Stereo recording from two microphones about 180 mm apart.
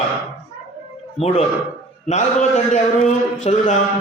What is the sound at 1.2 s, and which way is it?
A man's voice, 35° left (ahead or behind).